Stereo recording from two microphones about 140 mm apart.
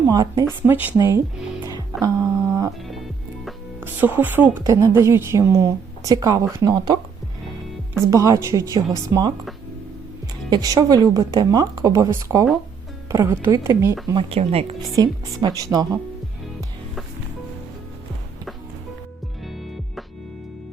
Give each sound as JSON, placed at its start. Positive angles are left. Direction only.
{"t": 0.1, "sound": "a woman's voice", "side_deg": -25}
{"t": 0.7, "sound": "a woman's voice", "side_deg": -15}
{"t": 1.6, "sound": "music", "side_deg": -25}
{"t": 3.8, "sound": "a woman's voice", "side_deg": -15}
{"t": 8.1, "sound": "a woman's voice", "side_deg": -20}
{"t": 10.5, "sound": "a woman's voice", "side_deg": -30}
{"t": 14.1, "sound": "speech", "side_deg": -40}
{"t": 14.9, "sound": "a woman's voice", "side_deg": -30}